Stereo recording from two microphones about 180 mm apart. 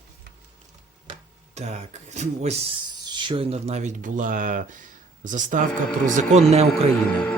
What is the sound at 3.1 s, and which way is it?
Speech, 25° right (ahead or behind).